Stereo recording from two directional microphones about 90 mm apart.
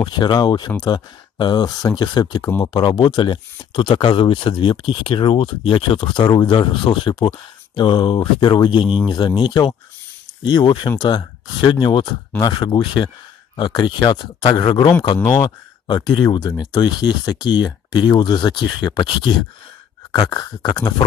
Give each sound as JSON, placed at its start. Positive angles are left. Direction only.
{"t": 0.0, "sound": "speech", "side_deg": 55}
{"t": 8.8, "sound": "speech", "side_deg": -10}
{"t": 9.4, "sound": "speech", "side_deg": 55}
{"t": 14.7, "sound": "speech", "side_deg": 65}
{"t": 15.2, "sound": "speech", "side_deg": 45}